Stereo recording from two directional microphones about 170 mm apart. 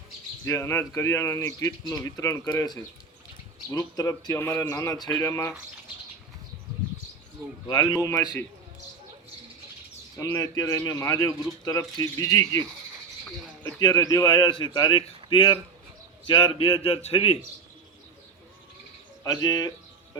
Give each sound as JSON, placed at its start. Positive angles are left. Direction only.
{"t": 0.4, "sound": "speech", "side_deg": 15}
{"t": 7.7, "sound": "speech", "side_deg": 25}
{"t": 10.2, "sound": "speech", "side_deg": 20}
{"t": 13.7, "sound": "a man's voice", "side_deg": 20}
{"t": 19.2, "sound": "speech", "side_deg": 25}